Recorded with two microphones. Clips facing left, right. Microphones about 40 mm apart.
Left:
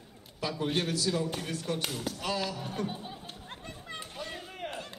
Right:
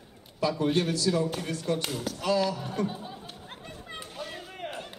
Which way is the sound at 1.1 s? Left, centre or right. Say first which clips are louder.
Right 4 dB; centre.